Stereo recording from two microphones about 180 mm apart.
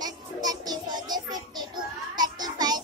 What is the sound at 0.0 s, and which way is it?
Music, 20° right (ahead or behind).